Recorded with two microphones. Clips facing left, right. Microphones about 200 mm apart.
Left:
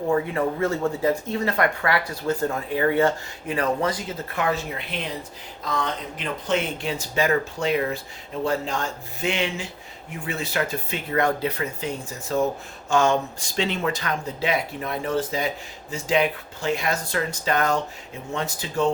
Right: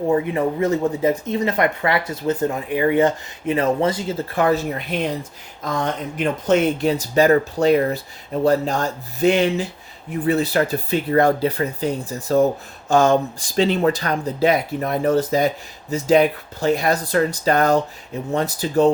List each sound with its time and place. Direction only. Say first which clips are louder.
0.1 s speech: right 2 dB; 20° right (ahead or behind)
4.4 s speech: right 6 dB; 40° right (ahead or behind)